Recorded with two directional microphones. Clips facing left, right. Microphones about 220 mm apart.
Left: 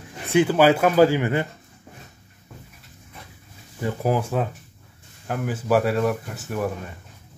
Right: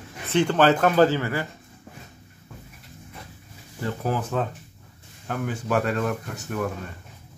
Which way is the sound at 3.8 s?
10° left (ahead or behind).